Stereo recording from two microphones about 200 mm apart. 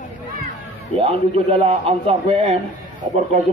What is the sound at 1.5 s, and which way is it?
A man's voice, 30° right (ahead or behind).